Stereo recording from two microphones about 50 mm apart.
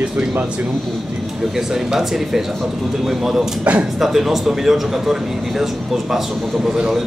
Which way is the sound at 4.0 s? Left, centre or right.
Centre.